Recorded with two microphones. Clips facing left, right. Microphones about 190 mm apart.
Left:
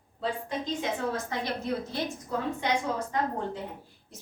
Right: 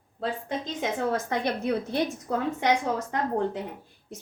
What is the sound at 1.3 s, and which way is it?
A woman's voice, 65° right (ahead or behind).